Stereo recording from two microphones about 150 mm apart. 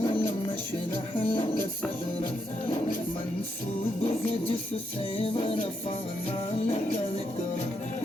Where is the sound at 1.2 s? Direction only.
35° left (ahead or behind).